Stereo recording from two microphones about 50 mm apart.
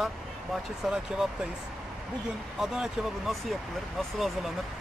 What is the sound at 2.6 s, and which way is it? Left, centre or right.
Speech, centre.